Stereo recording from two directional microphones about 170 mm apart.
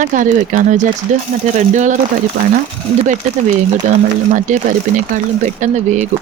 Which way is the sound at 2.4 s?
70° right (ahead or behind).